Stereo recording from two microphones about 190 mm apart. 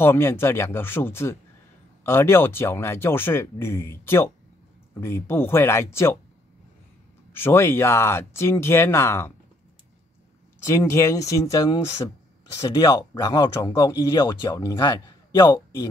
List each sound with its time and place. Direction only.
0.0 s speech: 15° left (ahead or behind)
7.3 s speech: 10° left (ahead or behind)
10.6 s speech: 15° left (ahead or behind)